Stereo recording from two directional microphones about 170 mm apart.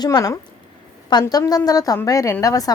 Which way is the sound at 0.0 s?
20° left (ahead or behind).